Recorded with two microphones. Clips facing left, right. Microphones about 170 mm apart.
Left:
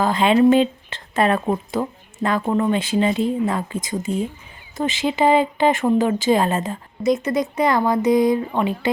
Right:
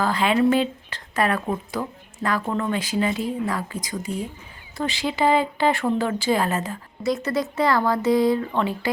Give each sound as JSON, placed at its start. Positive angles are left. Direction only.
{"t": 0.0, "sound": "speech", "side_deg": 25}